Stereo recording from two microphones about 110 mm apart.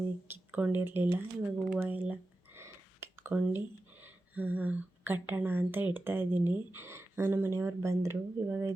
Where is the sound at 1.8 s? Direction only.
15° right (ahead or behind).